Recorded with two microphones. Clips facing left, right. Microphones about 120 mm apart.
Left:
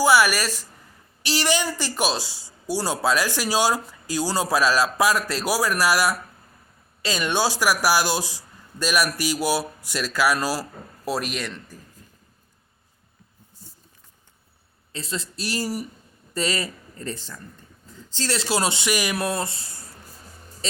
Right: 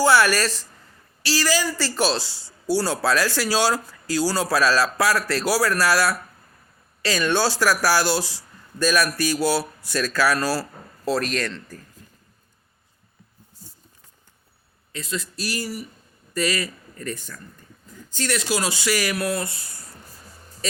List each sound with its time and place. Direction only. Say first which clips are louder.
0.0 s speech: right 1 dB; 10° left (ahead or behind)
1.2 s speech: right 1 dB; 20° left (ahead or behind)
14.9 s speech: right 1 dB; 30° left (ahead or behind)